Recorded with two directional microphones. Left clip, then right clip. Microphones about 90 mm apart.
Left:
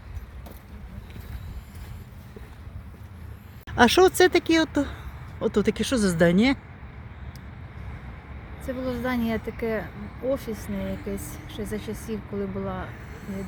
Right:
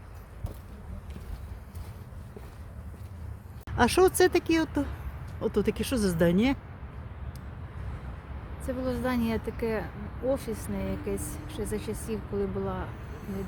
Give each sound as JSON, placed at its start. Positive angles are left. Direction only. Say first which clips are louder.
{"t": 3.8, "sound": "speech", "louder": "left 5 dB", "side_deg": 35}
{"t": 8.6, "sound": "speech", "louder": "left 2 dB", "side_deg": 15}